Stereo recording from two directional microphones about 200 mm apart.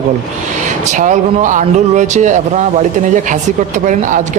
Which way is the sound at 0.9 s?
40° right (ahead or behind).